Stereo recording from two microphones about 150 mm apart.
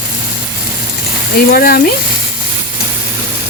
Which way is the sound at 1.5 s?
80° left.